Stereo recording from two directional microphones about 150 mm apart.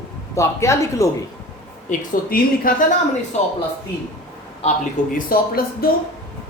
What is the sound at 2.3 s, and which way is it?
Speech, 75° left (ahead or behind).